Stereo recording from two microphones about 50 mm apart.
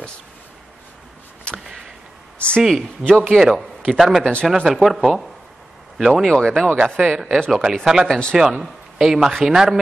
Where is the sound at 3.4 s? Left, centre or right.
Centre.